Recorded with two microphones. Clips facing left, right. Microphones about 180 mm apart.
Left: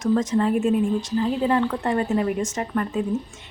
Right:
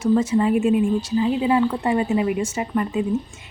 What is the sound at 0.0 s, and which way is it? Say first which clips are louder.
Speech: right 2 dB; 10° right (ahead or behind).